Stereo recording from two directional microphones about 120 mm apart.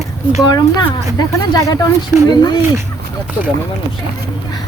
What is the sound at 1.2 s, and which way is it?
Speech, 30° left (ahead or behind).